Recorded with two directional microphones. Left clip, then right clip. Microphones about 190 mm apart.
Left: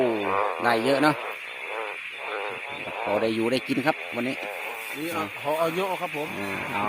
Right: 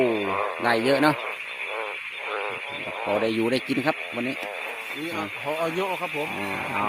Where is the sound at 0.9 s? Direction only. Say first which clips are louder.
Right 2 dB; 10° right (ahead or behind).